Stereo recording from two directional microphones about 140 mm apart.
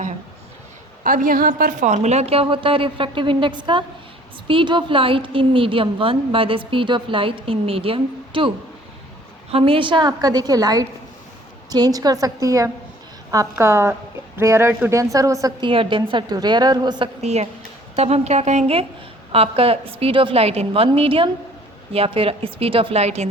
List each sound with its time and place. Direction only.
1.0 s a woman's voice: 80° right; by 15.5 s 25° right (ahead or behind)
15.6 s a woman's voice: 40° right (ahead or behind)
17.2 s a woman's voice: 50° right (ahead or behind)